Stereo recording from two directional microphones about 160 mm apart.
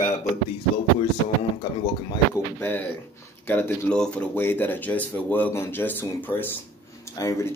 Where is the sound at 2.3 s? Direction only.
15° left (ahead or behind).